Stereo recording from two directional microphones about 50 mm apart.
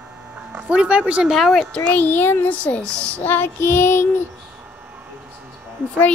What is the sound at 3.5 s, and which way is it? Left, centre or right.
Child singing, left.